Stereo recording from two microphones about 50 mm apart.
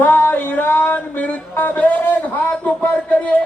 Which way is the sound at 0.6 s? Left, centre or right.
Left.